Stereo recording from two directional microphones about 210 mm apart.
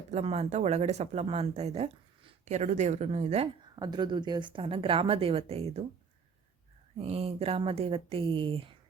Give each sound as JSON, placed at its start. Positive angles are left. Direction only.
{"t": 0.1, "sound": "speech", "side_deg": -30}
{"t": 6.9, "sound": "speech", "side_deg": -30}